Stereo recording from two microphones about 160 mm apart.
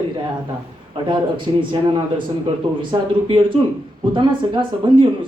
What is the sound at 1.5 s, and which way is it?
Speech, 35° right (ahead or behind).